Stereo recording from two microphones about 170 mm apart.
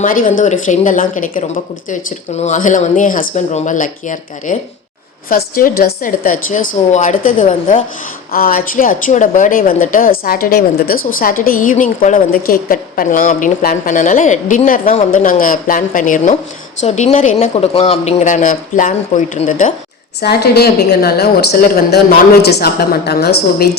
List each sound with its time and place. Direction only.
0.0 s a woman's voice: 55° left (ahead or behind)
8.3 s a woman's voice: 60° left (ahead or behind)
20.2 s a woman's voice: 70° left (ahead or behind)